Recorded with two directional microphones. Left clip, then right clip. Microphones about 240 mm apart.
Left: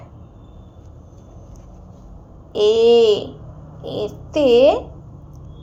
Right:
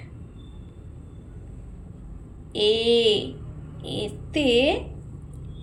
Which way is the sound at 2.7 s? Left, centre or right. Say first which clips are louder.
Left 7 dB; centre.